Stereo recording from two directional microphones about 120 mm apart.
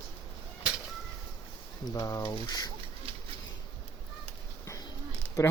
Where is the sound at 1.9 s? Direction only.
30° left (ahead or behind).